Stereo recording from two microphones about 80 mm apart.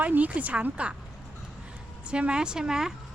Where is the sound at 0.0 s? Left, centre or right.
Centre.